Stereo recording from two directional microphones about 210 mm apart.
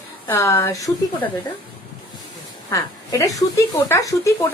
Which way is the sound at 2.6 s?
15° left (ahead or behind).